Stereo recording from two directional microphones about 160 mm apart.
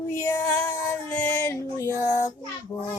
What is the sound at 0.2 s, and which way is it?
Female singing, 15° left (ahead or behind).